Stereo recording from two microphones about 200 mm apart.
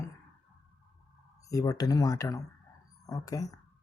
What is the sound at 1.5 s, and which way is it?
Speech, 20° left (ahead or behind).